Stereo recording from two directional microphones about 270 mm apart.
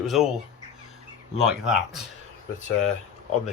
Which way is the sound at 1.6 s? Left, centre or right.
Centre.